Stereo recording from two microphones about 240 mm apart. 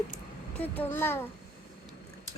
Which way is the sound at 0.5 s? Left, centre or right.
Centre.